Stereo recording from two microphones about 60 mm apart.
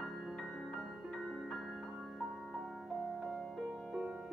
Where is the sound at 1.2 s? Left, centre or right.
Centre.